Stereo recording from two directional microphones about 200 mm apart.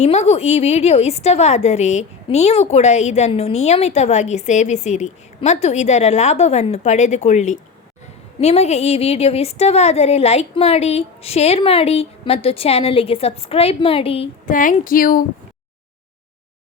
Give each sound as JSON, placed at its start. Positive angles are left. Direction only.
{"t": 0.0, "sound": "a woman's voice", "side_deg": 35}
{"t": 14.5, "sound": "speech", "side_deg": 40}